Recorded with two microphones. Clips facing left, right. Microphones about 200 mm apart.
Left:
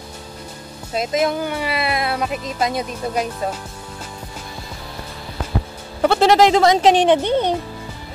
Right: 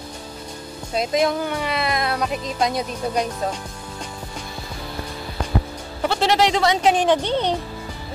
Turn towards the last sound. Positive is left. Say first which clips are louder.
# left 3 dB
turn(degrees=10)  # may be behind; listen again after turning